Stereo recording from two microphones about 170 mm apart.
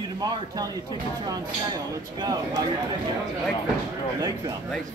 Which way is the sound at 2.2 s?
20° right (ahead or behind).